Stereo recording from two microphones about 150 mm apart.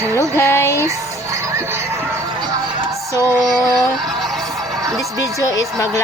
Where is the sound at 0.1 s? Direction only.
20° left (ahead or behind).